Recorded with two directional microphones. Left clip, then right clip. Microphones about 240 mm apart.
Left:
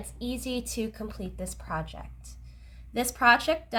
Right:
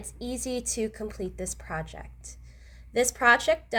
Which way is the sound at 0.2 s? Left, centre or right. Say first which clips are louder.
Right 1 dB; centre.